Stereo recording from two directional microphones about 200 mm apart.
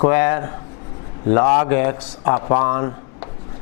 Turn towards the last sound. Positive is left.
turn(degrees=20)  # may be behind; listen again after turning